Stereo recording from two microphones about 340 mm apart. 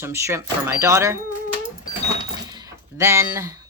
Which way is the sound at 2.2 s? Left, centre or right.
Centre.